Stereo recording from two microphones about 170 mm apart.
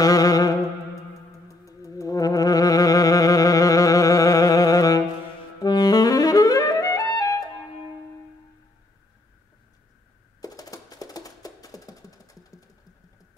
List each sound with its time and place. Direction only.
0.0 s music: 20° left (ahead or behind)
5.2 s clarinet: 25° left (ahead or behind)
10.4 s music: 20° left (ahead or behind)